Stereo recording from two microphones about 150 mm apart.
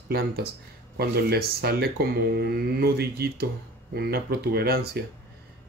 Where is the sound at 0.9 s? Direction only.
90° right.